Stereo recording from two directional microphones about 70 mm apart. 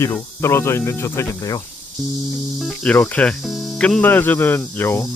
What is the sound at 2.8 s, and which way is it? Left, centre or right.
Speech, left.